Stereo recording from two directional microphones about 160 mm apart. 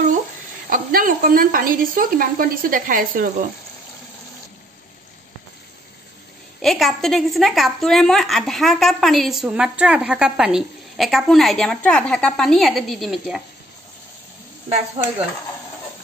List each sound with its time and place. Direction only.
0.7 s speech: 60° right (ahead or behind)
6.6 s a woman's voice: centre (ahead or behind)